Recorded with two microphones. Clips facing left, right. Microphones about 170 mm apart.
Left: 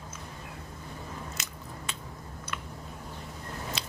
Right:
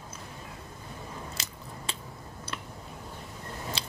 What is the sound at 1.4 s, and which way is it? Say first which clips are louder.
Biting: even; 30° right (ahead or behind).